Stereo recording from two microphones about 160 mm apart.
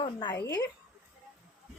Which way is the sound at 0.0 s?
30° left (ahead or behind).